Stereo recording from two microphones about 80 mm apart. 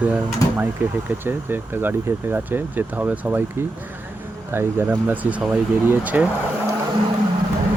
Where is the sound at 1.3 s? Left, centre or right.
Right.